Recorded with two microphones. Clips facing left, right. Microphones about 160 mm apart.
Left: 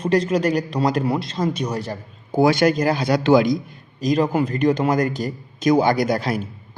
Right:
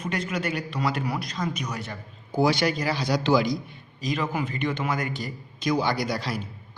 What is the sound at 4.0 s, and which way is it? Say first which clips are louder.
A man's voice: left 9 dB; 40° left (ahead or behind).